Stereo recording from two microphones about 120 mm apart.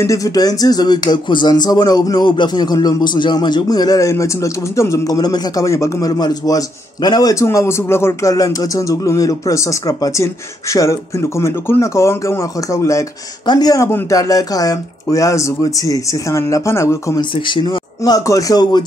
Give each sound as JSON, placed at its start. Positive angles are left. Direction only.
{"t": 0.0, "sound": "speech", "side_deg": 30}
{"t": 17.2, "sound": "a man's voice", "side_deg": 40}